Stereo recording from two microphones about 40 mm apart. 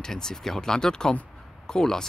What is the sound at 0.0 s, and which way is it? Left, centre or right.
Speech, centre.